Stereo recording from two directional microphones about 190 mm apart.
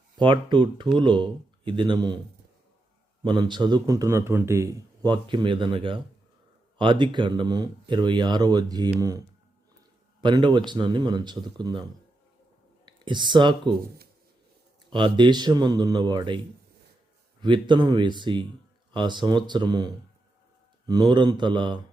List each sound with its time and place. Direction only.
0.2 s a man's voice: 25° right (ahead or behind)
3.2 s a man's voice: 25° right (ahead or behind)
10.2 s a man's voice: 25° right (ahead or behind)
12.8 s speech: 25° right (ahead or behind)
14.9 s a man's voice: 25° right (ahead or behind)